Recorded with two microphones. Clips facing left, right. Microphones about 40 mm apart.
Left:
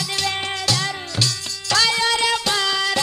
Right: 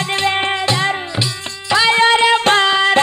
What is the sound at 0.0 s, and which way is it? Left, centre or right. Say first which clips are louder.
Music: right 7 dB; right.